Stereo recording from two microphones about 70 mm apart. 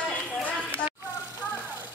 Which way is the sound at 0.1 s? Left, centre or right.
Left.